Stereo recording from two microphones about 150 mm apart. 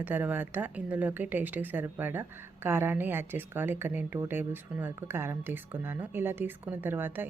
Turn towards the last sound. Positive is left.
turn(degrees=-15)  # may be behind; listen again after turning